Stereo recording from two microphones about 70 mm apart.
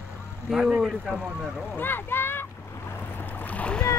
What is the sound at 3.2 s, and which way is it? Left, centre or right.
Boat, left.